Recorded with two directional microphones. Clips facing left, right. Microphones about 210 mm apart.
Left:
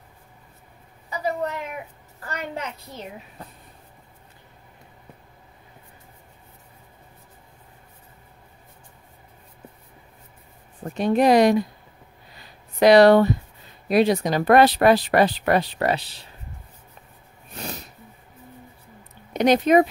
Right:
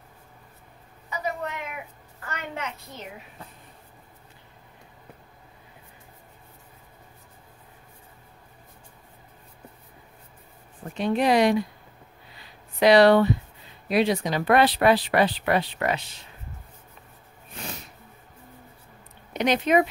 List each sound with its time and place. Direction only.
1.2 s a sound: 35° left (ahead or behind)
11.0 s speech: 45° left (ahead or behind)
12.7 s speech: 45° left (ahead or behind)
17.6 s snort: 40° left (ahead or behind)
19.3 s speech: 40° left (ahead or behind)